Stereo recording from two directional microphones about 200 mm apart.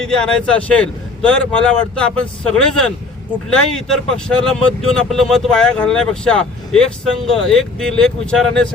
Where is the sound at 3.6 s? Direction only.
5° left (ahead or behind).